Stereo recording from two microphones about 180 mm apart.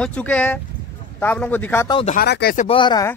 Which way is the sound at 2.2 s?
65° left (ahead or behind).